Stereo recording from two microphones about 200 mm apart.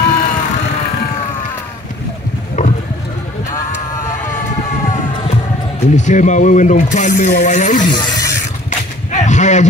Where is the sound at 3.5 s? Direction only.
15° left (ahead or behind).